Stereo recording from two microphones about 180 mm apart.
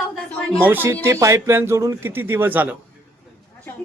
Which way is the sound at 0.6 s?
10° right (ahead or behind).